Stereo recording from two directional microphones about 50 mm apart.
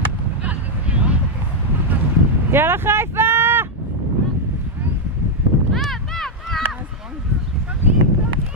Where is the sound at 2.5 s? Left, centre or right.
Right.